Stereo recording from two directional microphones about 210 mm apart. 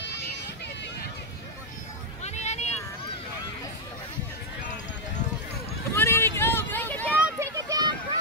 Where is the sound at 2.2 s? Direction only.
30° left (ahead or behind).